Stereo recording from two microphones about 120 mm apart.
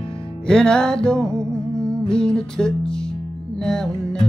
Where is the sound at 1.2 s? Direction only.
25° right (ahead or behind).